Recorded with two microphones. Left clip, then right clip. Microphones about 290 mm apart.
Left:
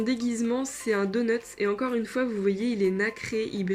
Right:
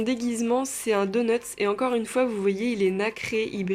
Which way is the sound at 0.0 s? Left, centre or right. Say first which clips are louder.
Right 1 dB; centre.